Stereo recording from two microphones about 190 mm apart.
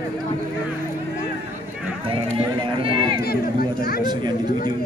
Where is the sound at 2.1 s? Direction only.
30° right (ahead or behind).